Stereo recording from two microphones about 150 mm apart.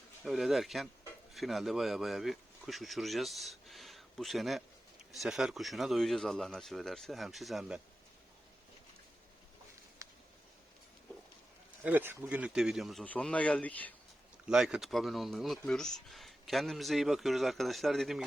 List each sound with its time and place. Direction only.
0.3 s speech: centre (ahead or behind)
10.0 s a sound: 20° right (ahead or behind)
11.8 s speech: 15° right (ahead or behind); by 13.9 s 10° left (ahead or behind)
14.4 s speech: 5° right (ahead or behind)